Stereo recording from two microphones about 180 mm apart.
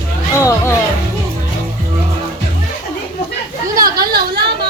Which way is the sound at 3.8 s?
60° right (ahead or behind).